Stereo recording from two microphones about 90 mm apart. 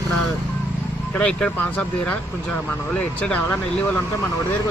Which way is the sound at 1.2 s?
10° left (ahead or behind).